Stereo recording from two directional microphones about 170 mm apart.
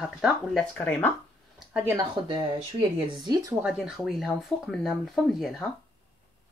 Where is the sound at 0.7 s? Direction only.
10° left (ahead or behind).